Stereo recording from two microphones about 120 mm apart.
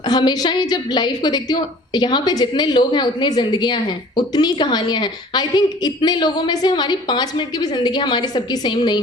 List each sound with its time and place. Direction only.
0.0 s a woman's voice: 35° left (ahead or behind)